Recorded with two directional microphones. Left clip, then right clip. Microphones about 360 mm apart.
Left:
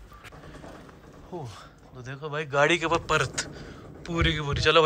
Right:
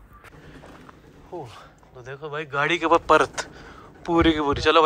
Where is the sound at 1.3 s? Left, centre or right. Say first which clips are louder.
Right 3 dB; centre.